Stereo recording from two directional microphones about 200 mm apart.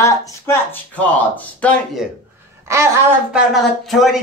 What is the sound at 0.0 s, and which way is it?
Speech, 15° left (ahead or behind).